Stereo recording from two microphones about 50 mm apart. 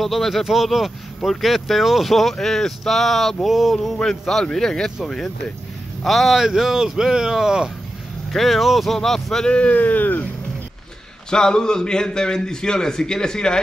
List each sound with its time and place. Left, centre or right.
0.0 s speech: centre
3.7 s a man's voice: centre
6.0 s speech: centre
8.3 s speech: centre
9.6 s speech: left
11.2 s a man's voice: centre